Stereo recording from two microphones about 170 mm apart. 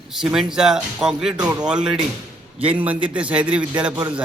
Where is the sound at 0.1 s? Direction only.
Centre (ahead or behind).